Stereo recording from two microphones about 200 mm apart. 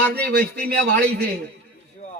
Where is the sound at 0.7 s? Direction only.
55° right (ahead or behind).